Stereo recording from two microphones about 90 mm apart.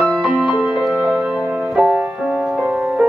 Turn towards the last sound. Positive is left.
turn(degrees=-10)  # may be behind; listen again after turning